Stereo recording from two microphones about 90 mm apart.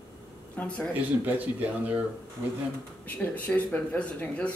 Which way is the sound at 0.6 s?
15° left (ahead or behind).